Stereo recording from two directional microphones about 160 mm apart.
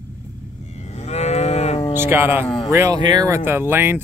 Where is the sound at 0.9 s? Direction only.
45° left (ahead or behind).